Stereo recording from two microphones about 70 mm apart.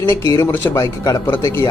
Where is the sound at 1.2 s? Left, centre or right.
Left.